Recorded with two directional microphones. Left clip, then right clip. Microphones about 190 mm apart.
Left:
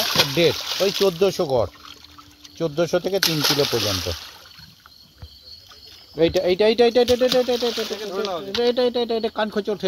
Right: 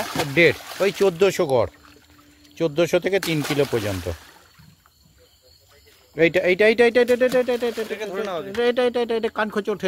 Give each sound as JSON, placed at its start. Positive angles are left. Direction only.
{"t": 0.0, "sound": "a sound", "side_deg": -5}
{"t": 0.4, "sound": "speech", "side_deg": -45}
{"t": 3.2, "sound": "speech", "side_deg": -15}
{"t": 6.1, "sound": "speech", "side_deg": -35}
{"t": 8.1, "sound": "speech", "side_deg": -50}
{"t": 8.6, "sound": "speech", "side_deg": -30}